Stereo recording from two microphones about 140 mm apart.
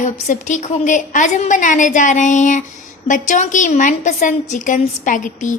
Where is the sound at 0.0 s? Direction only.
60° left (ahead or behind).